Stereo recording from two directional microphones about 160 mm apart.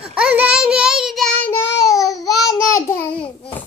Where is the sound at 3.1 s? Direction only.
5° left (ahead or behind).